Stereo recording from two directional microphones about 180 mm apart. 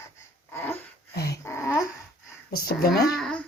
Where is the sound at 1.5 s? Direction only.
15° left (ahead or behind).